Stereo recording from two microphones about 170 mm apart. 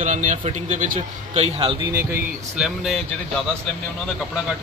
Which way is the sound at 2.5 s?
Centre (ahead or behind).